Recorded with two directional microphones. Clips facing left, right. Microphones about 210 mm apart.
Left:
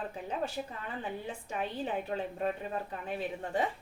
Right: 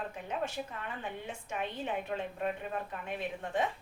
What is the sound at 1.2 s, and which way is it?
A woman's voice, 35° left (ahead or behind).